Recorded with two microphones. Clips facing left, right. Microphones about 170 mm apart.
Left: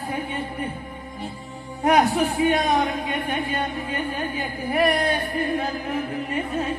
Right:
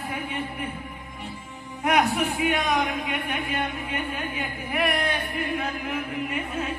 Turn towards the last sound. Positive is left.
turn(degrees=35)  # may be behind; listen again after turning